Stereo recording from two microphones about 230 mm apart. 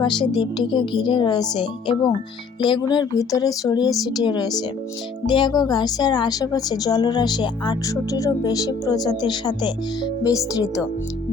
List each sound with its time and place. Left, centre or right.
0.0 s a woman's voice: centre